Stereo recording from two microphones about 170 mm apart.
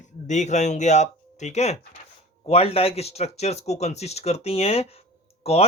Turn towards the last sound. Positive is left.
turn(degrees=35)  # may be behind; listen again after turning